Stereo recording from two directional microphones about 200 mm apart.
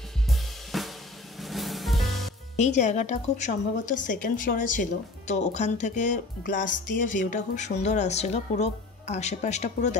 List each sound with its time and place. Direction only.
0.3 s drum kit: centre (ahead or behind)
1.4 s music: centre (ahead or behind)
2.5 s speech: 35° left (ahead or behind)